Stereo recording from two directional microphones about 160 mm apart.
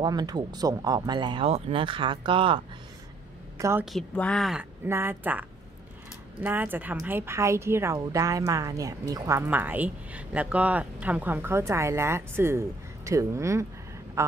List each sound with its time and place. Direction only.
0.0 s a woman's voice: 25° right (ahead or behind)
3.5 s a woman's voice: 20° right (ahead or behind)
3.9 s speech: 5° left (ahead or behind)
4.8 s a woman's voice: 15° right (ahead or behind)
9.5 s speech: 10° right (ahead or behind)